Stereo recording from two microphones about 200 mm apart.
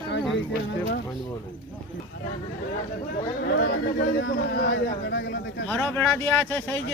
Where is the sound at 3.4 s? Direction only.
60° left (ahead or behind).